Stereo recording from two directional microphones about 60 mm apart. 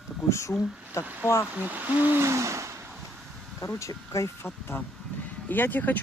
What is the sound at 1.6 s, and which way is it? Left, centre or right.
Speech, right.